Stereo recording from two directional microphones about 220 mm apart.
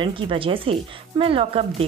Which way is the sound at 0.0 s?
25° right (ahead or behind).